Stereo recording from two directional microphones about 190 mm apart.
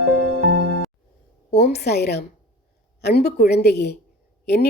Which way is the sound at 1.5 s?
60° left (ahead or behind).